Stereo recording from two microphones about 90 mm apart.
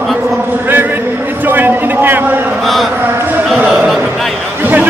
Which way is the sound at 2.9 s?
25° right (ahead or behind).